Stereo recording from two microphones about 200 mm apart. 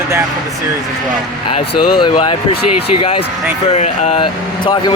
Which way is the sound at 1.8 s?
25° left (ahead or behind).